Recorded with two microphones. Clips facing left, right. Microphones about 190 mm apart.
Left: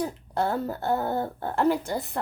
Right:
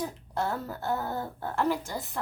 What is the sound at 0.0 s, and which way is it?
A woman's voice, 60° left (ahead or behind).